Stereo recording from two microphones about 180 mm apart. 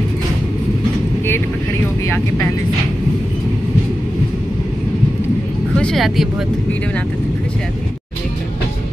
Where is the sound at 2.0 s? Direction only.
15° left (ahead or behind).